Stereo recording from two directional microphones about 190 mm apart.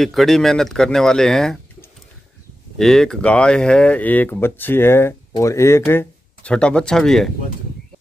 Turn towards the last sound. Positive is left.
turn(degrees=0)  # may be behind; listen again after turning